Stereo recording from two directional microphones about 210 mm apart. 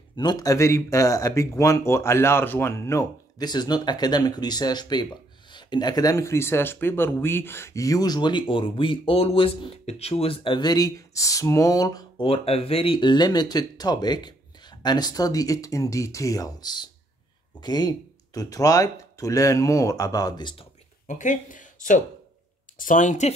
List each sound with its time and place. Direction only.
0.1 s speech: 20° left (ahead or behind)
21.1 s speech: 35° left (ahead or behind)